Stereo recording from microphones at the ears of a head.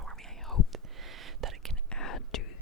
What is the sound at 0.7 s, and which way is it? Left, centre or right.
Whispering, right.